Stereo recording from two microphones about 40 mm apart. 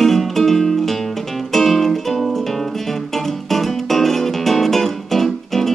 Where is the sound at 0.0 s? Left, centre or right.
Centre.